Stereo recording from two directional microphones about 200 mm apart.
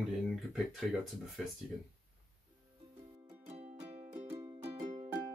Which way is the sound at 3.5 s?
35° right (ahead or behind).